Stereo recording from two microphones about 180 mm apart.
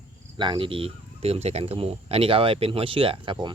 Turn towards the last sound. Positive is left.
turn(degrees=-25)  # may be behind; listen again after turning